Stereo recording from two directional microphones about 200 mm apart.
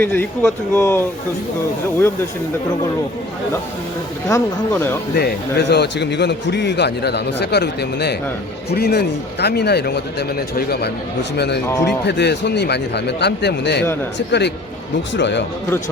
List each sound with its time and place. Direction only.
0.0 s speech: 10° left (ahead or behind)
4.3 s speech: 15° left (ahead or behind)
5.1 s a man's voice: 55° left (ahead or behind)
11.6 s speech: 15° left (ahead or behind)
12.0 s a man's voice: 60° left (ahead or behind)